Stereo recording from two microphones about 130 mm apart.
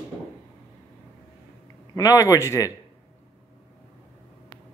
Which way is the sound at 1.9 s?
25° left (ahead or behind).